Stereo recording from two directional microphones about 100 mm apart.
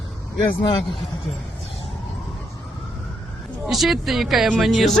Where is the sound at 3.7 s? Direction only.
Centre (ahead or behind).